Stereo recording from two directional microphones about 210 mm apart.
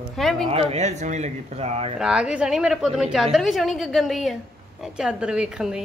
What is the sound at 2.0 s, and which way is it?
A woman's voice, 5° right (ahead or behind).